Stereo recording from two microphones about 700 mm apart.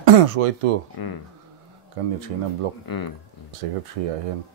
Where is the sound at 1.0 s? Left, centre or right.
Left.